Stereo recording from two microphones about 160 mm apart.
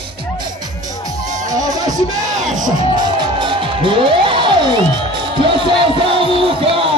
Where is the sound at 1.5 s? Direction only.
25° right (ahead or behind).